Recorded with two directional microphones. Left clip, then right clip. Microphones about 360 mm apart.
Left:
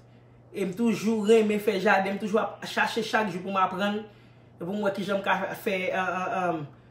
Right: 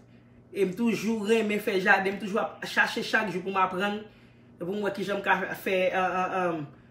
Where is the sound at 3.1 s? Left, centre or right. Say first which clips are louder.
Even; centre.